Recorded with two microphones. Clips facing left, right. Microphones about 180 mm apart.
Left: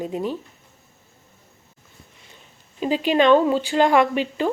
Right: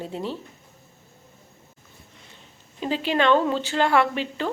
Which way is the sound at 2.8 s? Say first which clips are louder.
Left 4 dB; 15° left (ahead or behind).